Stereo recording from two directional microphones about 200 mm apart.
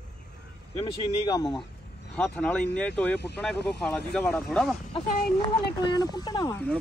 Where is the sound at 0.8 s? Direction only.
25° left (ahead or behind).